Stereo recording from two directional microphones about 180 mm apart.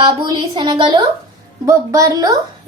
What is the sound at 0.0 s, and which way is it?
A child's voice, 25° right (ahead or behind).